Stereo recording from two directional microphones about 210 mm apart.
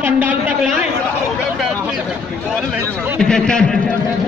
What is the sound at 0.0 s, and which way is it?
Speech, 10° right (ahead or behind).